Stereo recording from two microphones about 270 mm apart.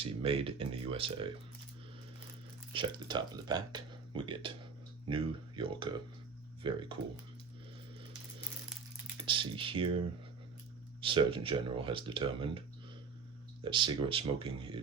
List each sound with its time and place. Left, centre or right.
0.0 s speech: right
2.7 s speech: centre
9.2 s speech: centre
11.0 s speech: centre
13.7 s speech: centre